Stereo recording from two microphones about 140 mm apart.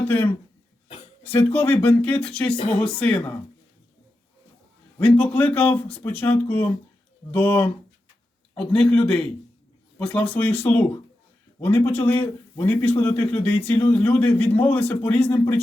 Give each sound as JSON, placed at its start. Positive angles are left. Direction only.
{"t": 0.0, "sound": "speech", "side_deg": 10}
{"t": 4.9, "sound": "speech", "side_deg": 10}